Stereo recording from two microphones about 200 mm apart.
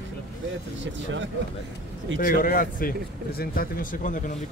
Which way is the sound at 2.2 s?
45° left (ahead or behind).